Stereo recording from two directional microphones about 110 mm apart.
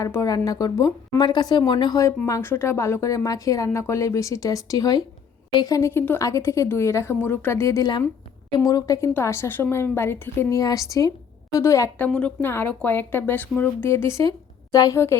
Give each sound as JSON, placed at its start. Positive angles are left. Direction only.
{"t": 0.3, "sound": "speech", "side_deg": 35}
{"t": 2.0, "sound": "a woman's voice", "side_deg": 30}
{"t": 11.9, "sound": "a woman's voice", "side_deg": 10}